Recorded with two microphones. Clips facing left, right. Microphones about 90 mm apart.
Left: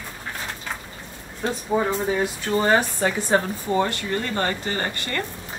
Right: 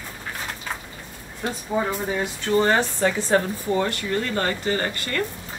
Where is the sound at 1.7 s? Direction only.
20° left (ahead or behind).